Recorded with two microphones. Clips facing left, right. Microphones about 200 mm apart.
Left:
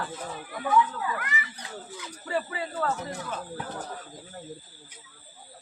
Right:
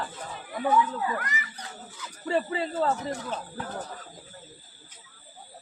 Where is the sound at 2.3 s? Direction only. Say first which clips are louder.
Right 4 dB; 25° right (ahead or behind).